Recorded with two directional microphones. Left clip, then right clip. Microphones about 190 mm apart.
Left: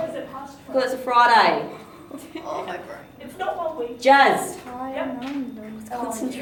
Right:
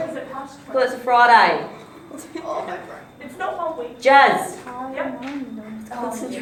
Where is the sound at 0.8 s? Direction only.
45° left (ahead or behind).